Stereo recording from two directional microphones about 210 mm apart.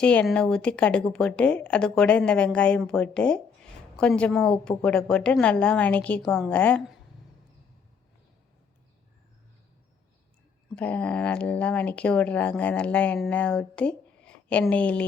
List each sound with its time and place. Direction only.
0.0 s speech: 5° left (ahead or behind)
10.8 s speech: 5° left (ahead or behind)